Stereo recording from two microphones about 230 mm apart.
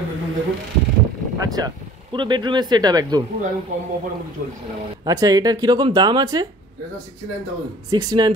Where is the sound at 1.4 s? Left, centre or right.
Centre.